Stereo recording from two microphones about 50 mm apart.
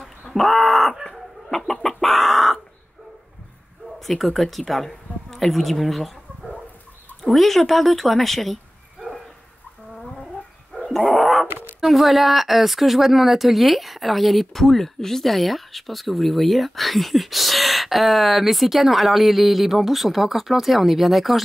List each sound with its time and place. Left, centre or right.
0.0 s chicken: centre
4.0 s speech: centre
7.2 s speech: centre
9.9 s gargling: centre
11.1 s cat: centre
11.8 s speech: centre